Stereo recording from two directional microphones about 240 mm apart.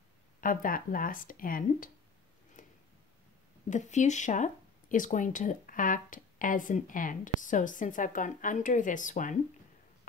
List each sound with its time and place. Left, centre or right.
0.4 s speech: left
2.6 s a sound: left
3.7 s speech: left